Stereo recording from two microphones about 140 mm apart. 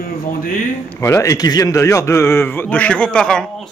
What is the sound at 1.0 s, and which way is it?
A man's voice, 20° left (ahead or behind).